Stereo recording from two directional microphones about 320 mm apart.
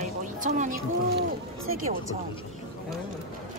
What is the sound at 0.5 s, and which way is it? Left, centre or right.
Speech, right.